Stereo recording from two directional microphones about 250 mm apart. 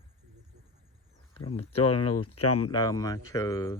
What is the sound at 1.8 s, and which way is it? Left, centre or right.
Speech, left.